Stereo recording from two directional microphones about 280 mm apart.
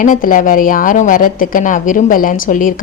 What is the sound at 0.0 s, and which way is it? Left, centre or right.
A woman's voice, left.